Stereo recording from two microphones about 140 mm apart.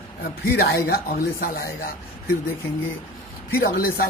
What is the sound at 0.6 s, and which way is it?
Speech, 90° left.